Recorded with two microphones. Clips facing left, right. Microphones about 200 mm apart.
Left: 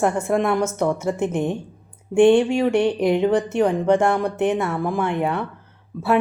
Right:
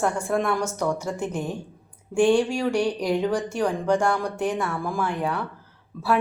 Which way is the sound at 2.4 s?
60° left (ahead or behind).